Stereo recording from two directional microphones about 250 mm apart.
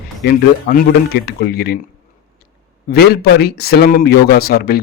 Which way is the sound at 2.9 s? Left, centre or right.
Left.